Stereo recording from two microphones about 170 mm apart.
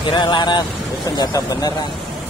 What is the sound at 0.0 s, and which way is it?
Speech, 25° left (ahead or behind).